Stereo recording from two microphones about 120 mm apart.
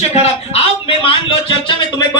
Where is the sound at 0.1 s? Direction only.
55° left (ahead or behind).